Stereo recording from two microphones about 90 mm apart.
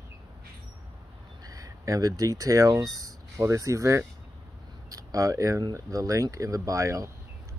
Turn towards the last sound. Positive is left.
turn(degrees=-35)  # may be behind; listen again after turning